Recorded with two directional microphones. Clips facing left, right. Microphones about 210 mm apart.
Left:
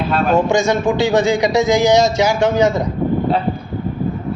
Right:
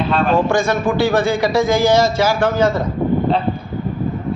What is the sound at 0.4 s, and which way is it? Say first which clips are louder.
A man's voice: left 1 dB; 15° left (ahead or behind).